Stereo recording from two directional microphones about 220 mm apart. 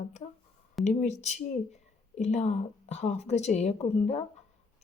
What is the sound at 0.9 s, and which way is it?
Speech, 30° left (ahead or behind).